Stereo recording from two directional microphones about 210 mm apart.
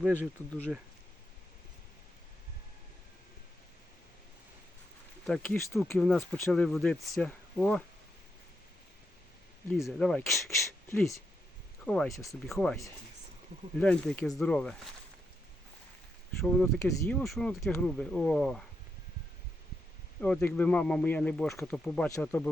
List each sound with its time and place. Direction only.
0.0 s speech: 10° right (ahead or behind)
5.2 s speech: 5° left (ahead or behind)
9.7 s speech: centre (ahead or behind)
10.6 s a sound: 10° left (ahead or behind)
11.9 s speech: 5° left (ahead or behind)
16.4 s speech: 5° left (ahead or behind)
20.2 s speech: 5° left (ahead or behind)